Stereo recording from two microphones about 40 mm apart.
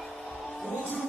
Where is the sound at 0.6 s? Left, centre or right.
Left.